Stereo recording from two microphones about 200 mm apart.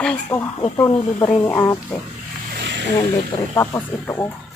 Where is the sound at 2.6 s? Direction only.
60° right (ahead or behind).